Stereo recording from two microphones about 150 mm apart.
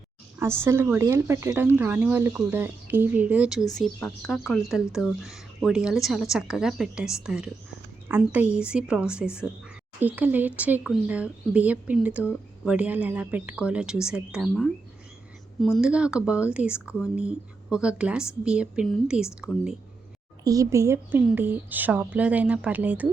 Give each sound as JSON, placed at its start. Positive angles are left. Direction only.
{"t": 0.3, "sound": "speech", "side_deg": -15}
{"t": 3.8, "sound": "speech", "side_deg": 5}
{"t": 15.6, "sound": "speech", "side_deg": -5}
{"t": 20.4, "sound": "a woman's voice", "side_deg": -25}